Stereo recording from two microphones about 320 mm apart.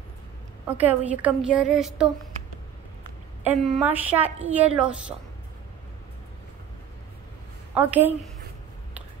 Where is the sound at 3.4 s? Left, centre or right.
Centre.